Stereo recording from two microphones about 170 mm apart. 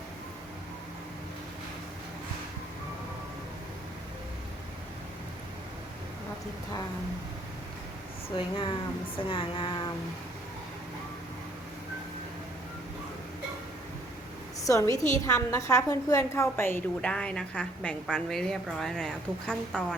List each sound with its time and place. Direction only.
8.4 s speech: 30° left (ahead or behind)
14.6 s a woman's voice: 20° left (ahead or behind)